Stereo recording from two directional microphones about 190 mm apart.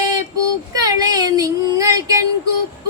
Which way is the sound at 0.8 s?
20° right (ahead or behind).